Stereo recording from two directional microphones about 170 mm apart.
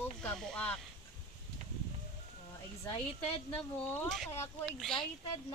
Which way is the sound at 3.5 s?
10° left (ahead or behind).